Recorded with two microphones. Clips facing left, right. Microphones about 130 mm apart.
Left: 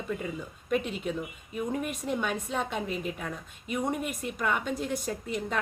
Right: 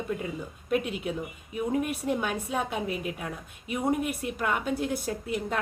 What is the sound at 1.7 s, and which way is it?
A woman's voice, 5° right (ahead or behind).